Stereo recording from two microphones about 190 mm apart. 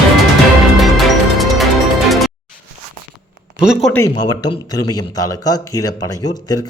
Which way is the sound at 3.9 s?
20° left (ahead or behind).